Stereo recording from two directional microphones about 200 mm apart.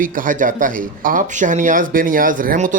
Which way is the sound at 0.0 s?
40° right (ahead or behind).